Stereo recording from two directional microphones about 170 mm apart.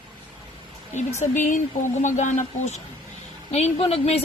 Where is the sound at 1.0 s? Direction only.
45° left (ahead or behind).